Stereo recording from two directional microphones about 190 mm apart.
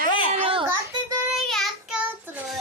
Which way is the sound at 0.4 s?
30° right (ahead or behind).